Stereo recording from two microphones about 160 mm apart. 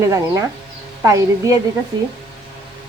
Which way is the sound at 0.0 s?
20° right (ahead or behind).